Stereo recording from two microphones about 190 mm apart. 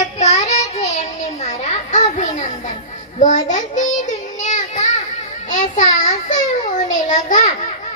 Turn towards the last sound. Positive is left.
turn(degrees=40)  # may be behind; listen again after turning